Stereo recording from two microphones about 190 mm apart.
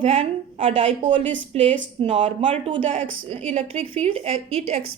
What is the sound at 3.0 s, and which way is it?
Speech, 90° right.